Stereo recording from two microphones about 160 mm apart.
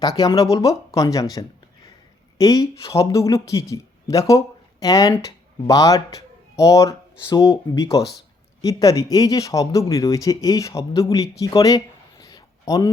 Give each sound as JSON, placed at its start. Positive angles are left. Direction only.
{"t": 0.0, "sound": "speech", "side_deg": 25}